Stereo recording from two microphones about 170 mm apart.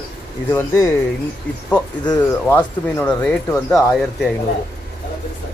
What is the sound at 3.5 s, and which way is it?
Speech, 20° left (ahead or behind).